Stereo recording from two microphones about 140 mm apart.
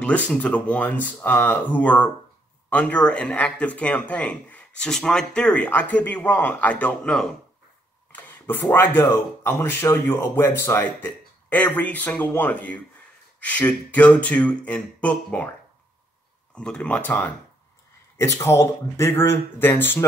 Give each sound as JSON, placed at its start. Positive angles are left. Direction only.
{"t": 0.0, "sound": "speech", "side_deg": 10}
{"t": 16.5, "sound": "speech", "side_deg": 5}